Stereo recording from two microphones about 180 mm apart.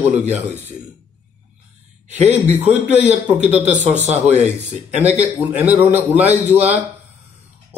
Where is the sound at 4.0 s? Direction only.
35° right (ahead or behind).